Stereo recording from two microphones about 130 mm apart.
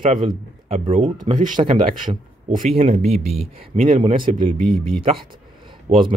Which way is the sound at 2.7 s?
50° right (ahead or behind).